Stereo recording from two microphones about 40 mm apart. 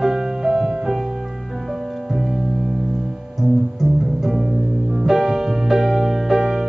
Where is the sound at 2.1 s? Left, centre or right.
Centre.